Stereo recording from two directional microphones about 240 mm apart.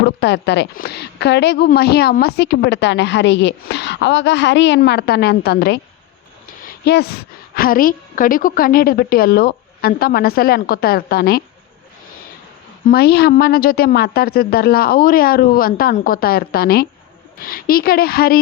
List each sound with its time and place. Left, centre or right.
0.0 s a woman's voice: left
12.8 s a woman's voice: left